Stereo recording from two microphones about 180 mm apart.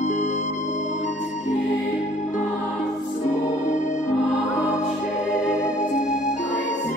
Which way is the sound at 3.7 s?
45° left (ahead or behind).